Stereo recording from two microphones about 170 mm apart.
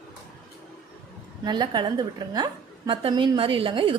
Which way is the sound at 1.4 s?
25° right (ahead or behind).